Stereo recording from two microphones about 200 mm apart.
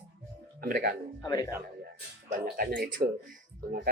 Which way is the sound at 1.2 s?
20° left (ahead or behind).